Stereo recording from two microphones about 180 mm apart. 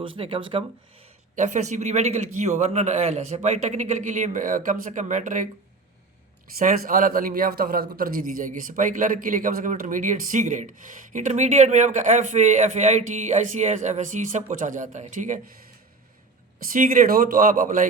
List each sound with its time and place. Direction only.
0.2 s speech: 30° right (ahead or behind)
1.4 s a man's voice: 40° right (ahead or behind)
6.6 s a man's voice: 50° right (ahead or behind)
16.6 s a man's voice: 50° right (ahead or behind)